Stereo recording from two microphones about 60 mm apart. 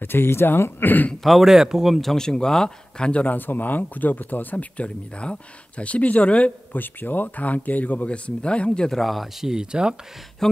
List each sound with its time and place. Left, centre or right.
0.0 s speech: left
1.2 s speech: centre
2.0 s speech: centre
3.3 s speech: left
6.8 s speech: left
8.9 s speech: centre
10.4 s speech: centre